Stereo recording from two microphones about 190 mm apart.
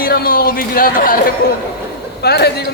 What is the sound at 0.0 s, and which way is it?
Speech, 50° left (ahead or behind).